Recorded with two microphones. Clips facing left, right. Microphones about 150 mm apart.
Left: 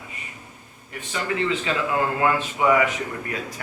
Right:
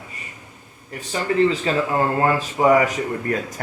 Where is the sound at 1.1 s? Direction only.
35° right (ahead or behind).